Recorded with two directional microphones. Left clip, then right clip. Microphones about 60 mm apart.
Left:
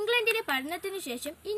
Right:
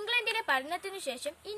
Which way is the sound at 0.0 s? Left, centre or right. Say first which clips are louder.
Left 4 dB; right.